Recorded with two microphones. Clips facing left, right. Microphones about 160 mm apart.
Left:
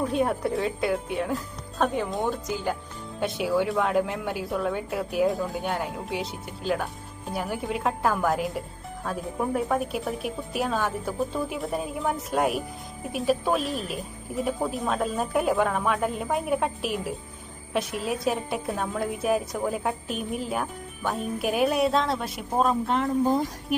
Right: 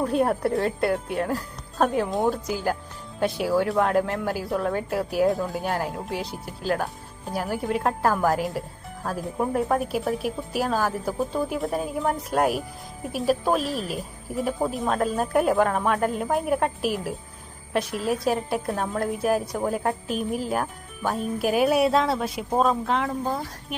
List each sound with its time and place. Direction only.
0.0 s a woman's voice: centre (ahead or behind)
23.2 s speech: 15° left (ahead or behind)